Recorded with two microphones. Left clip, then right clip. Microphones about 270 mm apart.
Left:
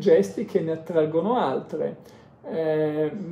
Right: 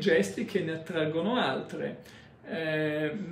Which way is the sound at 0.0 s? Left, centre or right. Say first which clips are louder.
Left 7 dB; centre.